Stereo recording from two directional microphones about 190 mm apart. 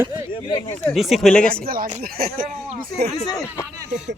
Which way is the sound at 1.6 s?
50° right (ahead or behind).